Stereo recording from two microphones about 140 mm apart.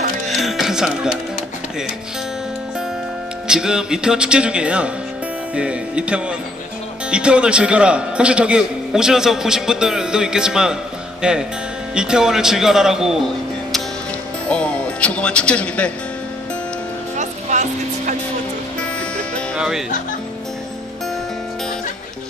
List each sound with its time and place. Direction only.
0.3 s music: centre (ahead or behind)
3.4 s a man's voice: 5° right (ahead or behind)
14.5 s speech: 5° left (ahead or behind)
17.2 s music: 60° right (ahead or behind)